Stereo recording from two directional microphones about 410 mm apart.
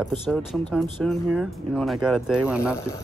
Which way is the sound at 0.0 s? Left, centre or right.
Centre.